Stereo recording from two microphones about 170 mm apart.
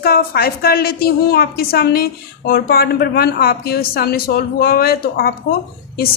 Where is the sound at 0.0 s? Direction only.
60° left (ahead or behind).